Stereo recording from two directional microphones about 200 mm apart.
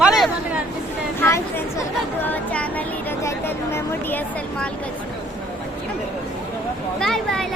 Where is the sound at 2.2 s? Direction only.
10° left (ahead or behind).